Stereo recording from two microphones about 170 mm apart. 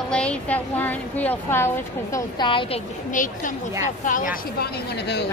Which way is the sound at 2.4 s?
30° left (ahead or behind).